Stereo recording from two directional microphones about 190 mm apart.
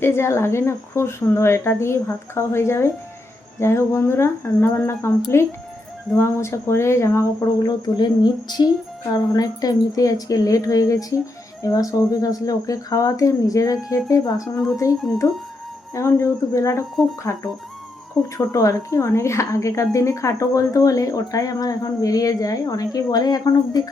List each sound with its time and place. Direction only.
0.0 s a woman's voice: 15° left (ahead or behind)
14.9 s speech: centre (ahead or behind)
16.0 s a woman's voice: 15° left (ahead or behind)
18.3 s a woman's voice: 15° left (ahead or behind)